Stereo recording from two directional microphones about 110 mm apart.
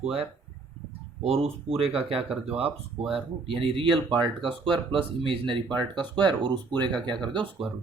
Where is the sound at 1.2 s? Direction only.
65° right (ahead or behind); by 6.9 s 40° right (ahead or behind).